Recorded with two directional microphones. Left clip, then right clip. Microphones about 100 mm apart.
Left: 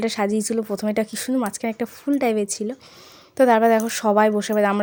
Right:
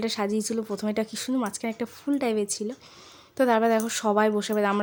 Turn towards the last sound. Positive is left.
turn(degrees=25)  # may be behind; listen again after turning